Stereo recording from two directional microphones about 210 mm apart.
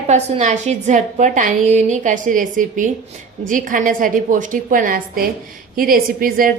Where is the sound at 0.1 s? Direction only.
35° right (ahead or behind).